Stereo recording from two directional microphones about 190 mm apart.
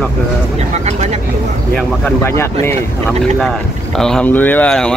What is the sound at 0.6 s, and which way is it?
Speech, 35° right (ahead or behind).